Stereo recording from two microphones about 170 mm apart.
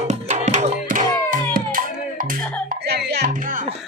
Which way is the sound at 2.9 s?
70° right (ahead or behind).